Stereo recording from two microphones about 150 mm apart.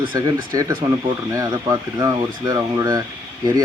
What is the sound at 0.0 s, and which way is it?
Speech, 25° right (ahead or behind).